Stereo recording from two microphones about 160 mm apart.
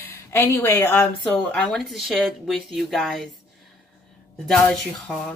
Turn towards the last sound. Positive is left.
turn(degrees=5)  # may be behind; listen again after turning